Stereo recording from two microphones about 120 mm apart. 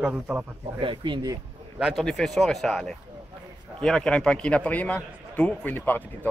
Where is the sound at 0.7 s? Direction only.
45° right (ahead or behind).